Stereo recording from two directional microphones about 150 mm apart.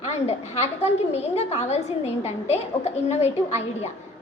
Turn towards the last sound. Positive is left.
turn(degrees=45)  # may be behind; listen again after turning